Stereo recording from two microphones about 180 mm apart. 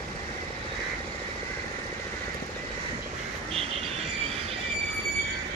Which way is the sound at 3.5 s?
35° right (ahead or behind).